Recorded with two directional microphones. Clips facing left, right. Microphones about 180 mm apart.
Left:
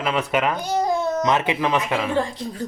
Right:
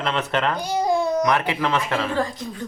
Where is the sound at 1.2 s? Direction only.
20° left (ahead or behind).